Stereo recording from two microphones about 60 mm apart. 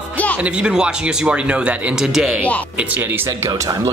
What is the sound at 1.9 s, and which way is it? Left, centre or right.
Speech, centre.